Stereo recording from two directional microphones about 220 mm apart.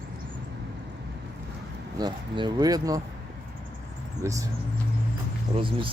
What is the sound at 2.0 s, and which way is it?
Speech, 20° right (ahead or behind).